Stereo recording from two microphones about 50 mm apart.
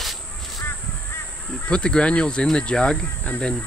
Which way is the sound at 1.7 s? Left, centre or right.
Centre.